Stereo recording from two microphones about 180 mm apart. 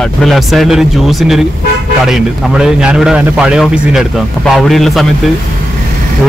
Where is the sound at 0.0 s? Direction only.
Centre (ahead or behind).